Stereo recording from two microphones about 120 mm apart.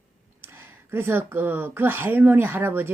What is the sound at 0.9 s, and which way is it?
A woman's voice, 20° right (ahead or behind).